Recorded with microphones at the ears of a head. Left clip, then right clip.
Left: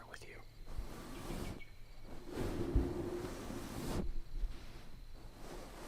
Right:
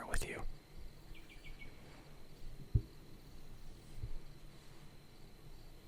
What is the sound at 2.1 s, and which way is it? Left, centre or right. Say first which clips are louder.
Ocean: left 17 dB; left.